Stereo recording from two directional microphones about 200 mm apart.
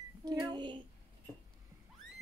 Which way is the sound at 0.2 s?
20° right (ahead or behind).